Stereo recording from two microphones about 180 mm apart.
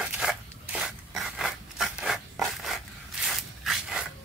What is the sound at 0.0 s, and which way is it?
Rub, 5° right (ahead or behind).